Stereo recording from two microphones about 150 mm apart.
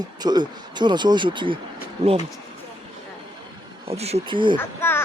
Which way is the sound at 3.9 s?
45° right (ahead or behind).